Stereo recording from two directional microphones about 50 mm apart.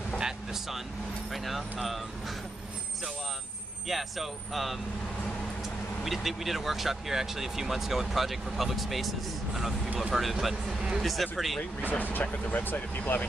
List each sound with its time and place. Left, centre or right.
1.3 s speech: centre
3.9 s speech: centre
6.0 s speech: centre
11.8 s speech: left